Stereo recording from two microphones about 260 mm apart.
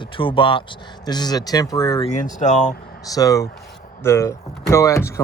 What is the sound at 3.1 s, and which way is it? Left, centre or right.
Speech, centre.